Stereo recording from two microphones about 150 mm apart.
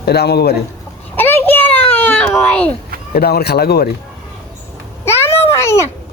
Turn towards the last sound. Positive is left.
turn(degrees=20)  # may be behind; listen again after turning